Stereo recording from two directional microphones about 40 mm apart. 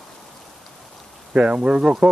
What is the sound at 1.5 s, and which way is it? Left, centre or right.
Speech, right.